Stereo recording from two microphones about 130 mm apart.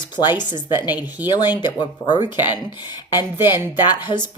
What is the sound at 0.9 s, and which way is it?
Speech, 15° right (ahead or behind).